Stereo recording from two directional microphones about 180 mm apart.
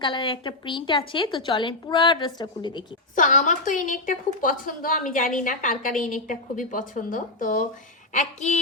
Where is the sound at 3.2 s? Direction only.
45° left (ahead or behind).